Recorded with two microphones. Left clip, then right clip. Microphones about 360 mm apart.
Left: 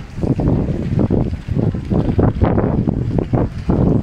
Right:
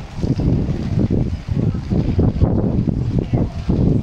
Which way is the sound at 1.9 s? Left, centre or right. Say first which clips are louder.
Left 4 dB; left.